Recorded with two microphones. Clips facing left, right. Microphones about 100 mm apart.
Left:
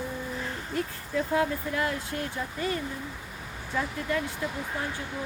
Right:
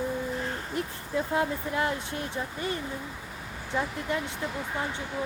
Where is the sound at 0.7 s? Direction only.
20° right (ahead or behind).